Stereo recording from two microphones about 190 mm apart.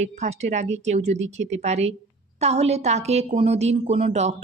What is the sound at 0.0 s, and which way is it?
A woman's voice, 35° right (ahead or behind).